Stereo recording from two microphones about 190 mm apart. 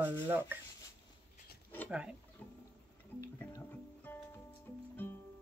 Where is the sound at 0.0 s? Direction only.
10° right (ahead or behind).